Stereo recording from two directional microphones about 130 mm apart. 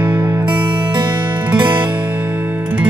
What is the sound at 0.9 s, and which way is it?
Music, 35° right (ahead or behind).